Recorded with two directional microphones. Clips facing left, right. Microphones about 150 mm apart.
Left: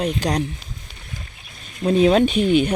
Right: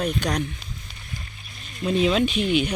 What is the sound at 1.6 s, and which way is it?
Speech, 45° left (ahead or behind).